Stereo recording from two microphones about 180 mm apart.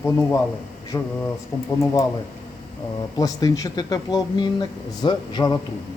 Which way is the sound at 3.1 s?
20° left (ahead or behind).